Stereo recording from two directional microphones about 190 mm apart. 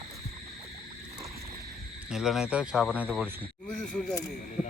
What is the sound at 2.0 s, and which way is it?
Speech, centre (ahead or behind).